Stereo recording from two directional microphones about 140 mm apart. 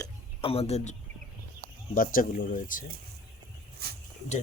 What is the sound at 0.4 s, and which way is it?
Speech, 45° left (ahead or behind).